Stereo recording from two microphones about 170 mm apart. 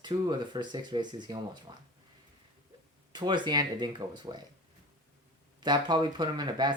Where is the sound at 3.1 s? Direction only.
25° right (ahead or behind).